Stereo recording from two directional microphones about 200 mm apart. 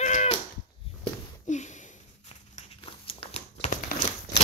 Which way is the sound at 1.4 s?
35° left (ahead or behind).